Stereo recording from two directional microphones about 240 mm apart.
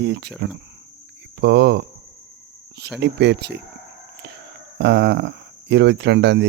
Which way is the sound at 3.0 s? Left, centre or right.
Right.